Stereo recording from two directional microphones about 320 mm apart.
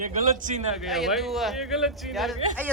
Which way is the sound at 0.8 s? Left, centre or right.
Centre.